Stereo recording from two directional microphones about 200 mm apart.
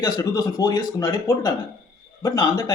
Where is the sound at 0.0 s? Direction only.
20° left (ahead or behind).